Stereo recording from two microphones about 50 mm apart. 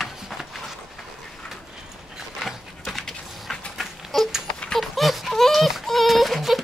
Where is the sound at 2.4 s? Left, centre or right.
Centre.